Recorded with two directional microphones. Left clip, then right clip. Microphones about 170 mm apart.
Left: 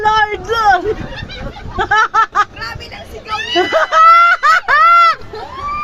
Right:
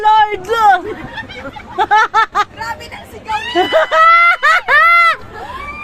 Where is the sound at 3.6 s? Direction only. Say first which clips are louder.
Even; 55° right (ahead or behind); by 5.2 s 40° right (ahead or behind).